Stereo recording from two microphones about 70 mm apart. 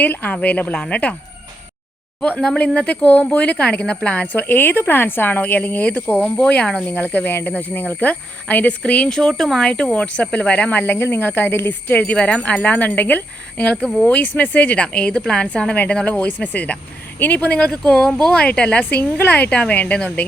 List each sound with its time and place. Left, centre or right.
0.0 s speech: left
2.2 s speech: centre
9.4 s speech: centre
9.6 s a woman's voice: centre
17.7 s speech: centre